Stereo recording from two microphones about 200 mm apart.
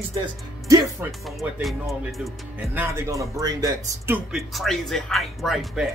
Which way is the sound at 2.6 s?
10° right (ahead or behind).